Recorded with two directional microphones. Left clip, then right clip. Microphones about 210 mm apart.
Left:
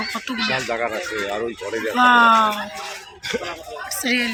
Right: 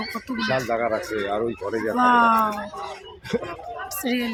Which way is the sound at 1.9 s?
Centre (ahead or behind).